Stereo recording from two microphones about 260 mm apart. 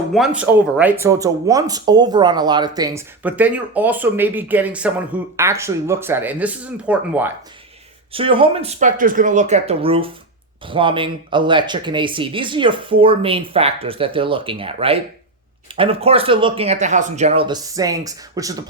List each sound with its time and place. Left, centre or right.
0.1 s speech: centre
8.1 s speech: centre